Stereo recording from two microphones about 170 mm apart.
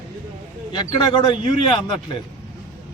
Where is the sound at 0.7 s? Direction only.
30° left (ahead or behind).